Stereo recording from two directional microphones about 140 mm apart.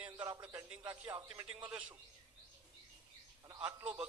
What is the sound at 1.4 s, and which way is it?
Speech, 45° right (ahead or behind).